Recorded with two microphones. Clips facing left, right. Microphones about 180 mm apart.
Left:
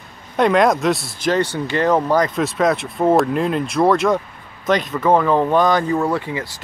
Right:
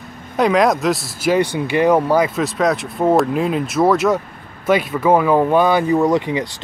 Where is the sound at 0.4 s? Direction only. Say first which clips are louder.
Even; centre (ahead or behind).